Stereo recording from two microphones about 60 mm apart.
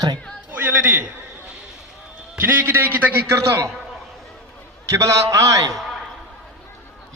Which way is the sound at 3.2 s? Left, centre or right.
Right.